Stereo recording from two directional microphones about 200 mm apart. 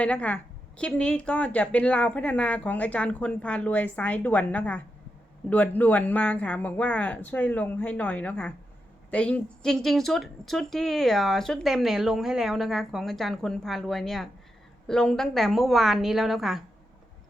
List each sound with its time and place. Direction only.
0.0 s a woman's voice: 5° left (ahead or behind)